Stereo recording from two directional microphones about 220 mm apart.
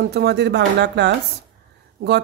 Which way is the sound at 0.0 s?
50° right (ahead or behind).